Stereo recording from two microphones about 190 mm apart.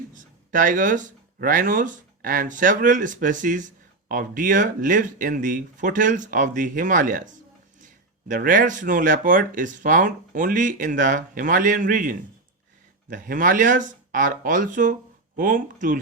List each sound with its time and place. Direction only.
0.1 s speech: 45° right (ahead or behind)